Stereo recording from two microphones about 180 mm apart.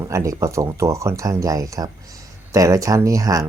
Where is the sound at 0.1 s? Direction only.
15° right (ahead or behind).